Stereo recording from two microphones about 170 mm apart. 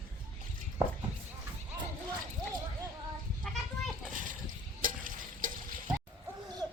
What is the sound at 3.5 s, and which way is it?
Children playing, 5° left (ahead or behind).